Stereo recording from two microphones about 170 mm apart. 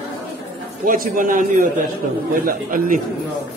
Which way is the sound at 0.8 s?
55° right (ahead or behind).